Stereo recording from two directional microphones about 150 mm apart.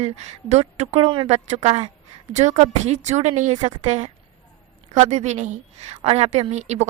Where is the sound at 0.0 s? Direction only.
50° right (ahead or behind).